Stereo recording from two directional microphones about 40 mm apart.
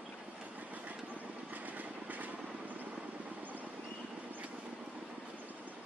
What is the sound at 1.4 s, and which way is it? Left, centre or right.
Vehicle, right.